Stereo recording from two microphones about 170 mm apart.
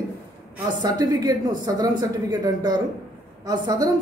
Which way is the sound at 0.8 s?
20° right (ahead or behind).